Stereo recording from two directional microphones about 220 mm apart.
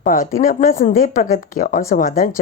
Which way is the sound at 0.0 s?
35° left (ahead or behind).